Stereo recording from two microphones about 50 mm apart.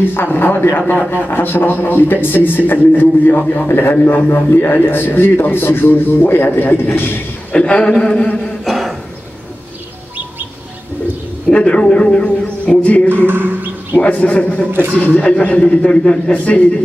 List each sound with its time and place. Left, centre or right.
0.0 s a man's voice: left
7.5 s a man's voice: left
8.6 s a sound: centre
11.4 s a man's voice: left
13.3 s speech: right
14.1 s a man's voice: left
14.7 s a man's voice: right
15.0 s a man's voice: left